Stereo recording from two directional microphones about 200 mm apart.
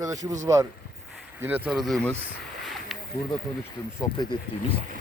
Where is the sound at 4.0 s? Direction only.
20° left (ahead or behind).